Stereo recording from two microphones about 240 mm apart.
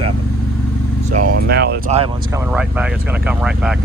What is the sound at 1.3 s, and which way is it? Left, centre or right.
Speech, right.